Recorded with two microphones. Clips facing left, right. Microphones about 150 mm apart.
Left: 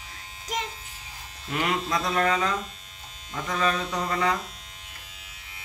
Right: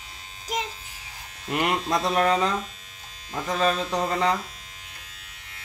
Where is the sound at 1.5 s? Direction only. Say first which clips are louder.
Right 3 dB; 60° right (ahead or behind).